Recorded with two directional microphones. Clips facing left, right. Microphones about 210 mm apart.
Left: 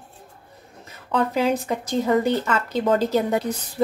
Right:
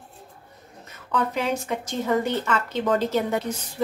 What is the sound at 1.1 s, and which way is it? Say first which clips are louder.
Speech: left 4 dB; 35° left (ahead or behind).